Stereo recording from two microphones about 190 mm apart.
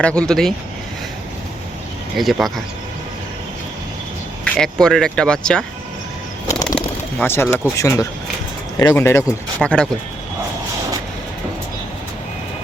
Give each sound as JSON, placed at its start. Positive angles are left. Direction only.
{"t": 0.0, "sound": "speech", "side_deg": 5}
{"t": 2.1, "sound": "speech", "side_deg": 0}
{"t": 4.5, "sound": "speech", "side_deg": 5}
{"t": 6.5, "sound": "bird", "side_deg": 20}
{"t": 6.7, "sound": "a sound", "side_deg": 10}
{"t": 7.8, "sound": "speech", "side_deg": 15}